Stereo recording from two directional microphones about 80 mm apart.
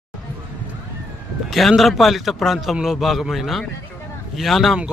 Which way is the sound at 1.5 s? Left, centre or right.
Centre.